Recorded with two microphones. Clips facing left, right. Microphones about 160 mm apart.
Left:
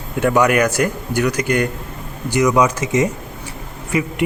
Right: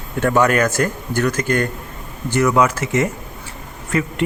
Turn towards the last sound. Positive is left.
turn(degrees=15)  # may be behind; listen again after turning